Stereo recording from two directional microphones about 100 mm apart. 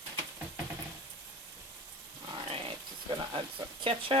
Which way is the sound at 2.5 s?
55° right (ahead or behind).